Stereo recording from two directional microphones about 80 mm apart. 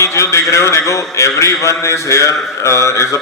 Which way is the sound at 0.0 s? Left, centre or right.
Left.